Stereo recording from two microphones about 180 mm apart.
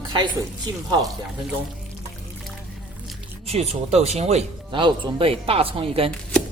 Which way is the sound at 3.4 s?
35° right (ahead or behind).